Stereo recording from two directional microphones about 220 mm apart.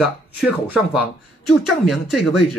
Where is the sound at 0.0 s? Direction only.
5° right (ahead or behind).